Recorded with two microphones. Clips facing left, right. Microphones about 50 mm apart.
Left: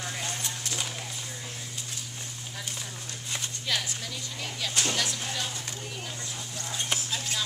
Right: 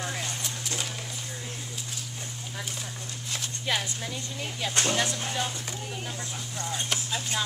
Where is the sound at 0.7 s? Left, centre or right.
Centre.